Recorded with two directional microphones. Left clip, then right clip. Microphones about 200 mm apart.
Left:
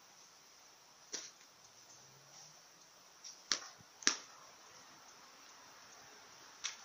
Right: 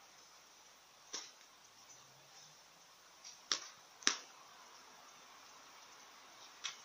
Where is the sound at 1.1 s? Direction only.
10° left (ahead or behind).